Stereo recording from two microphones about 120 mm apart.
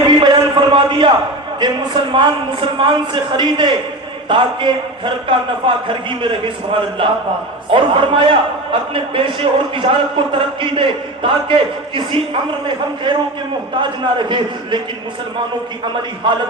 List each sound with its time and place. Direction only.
0.1 s a sound: 35° right (ahead or behind)
1.5 s a man's voice: 35° right (ahead or behind)
7.7 s a man's voice: 45° right (ahead or behind)